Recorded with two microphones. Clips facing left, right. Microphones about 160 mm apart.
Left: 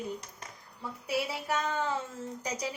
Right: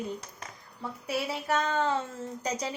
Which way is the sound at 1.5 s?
70° right (ahead or behind).